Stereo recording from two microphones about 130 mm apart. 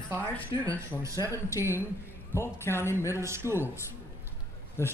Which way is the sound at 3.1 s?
20° right (ahead or behind).